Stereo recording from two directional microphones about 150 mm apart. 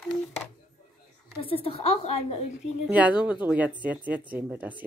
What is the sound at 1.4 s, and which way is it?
Speech, 40° left (ahead or behind).